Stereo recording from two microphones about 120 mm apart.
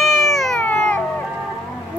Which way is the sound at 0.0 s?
Centre (ahead or behind).